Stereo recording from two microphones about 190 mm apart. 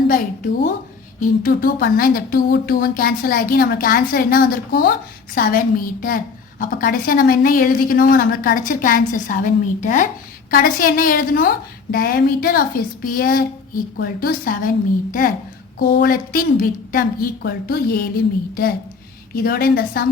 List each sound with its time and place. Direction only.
0.1 s speech: 45° left (ahead or behind)
19.3 s speech: 50° left (ahead or behind)